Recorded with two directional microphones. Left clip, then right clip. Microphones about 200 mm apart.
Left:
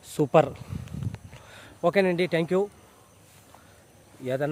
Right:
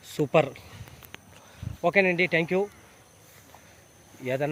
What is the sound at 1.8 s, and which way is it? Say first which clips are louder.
Speech: right 1 dB; 25° left (ahead or behind).